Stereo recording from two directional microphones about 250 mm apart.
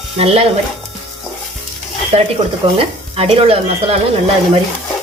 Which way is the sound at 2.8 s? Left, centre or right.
Right.